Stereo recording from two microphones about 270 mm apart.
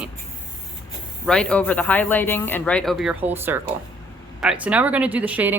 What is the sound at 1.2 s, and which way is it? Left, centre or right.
A woman's voice, centre.